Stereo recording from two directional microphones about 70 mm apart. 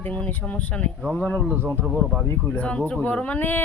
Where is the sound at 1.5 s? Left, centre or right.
Right.